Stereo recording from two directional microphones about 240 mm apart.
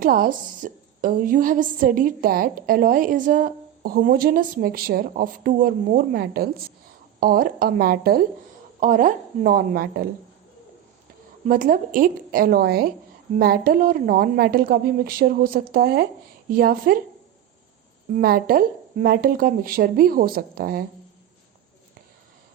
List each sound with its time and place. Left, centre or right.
0.0 s a woman's voice: right
11.4 s a woman's voice: right
18.1 s a woman's voice: right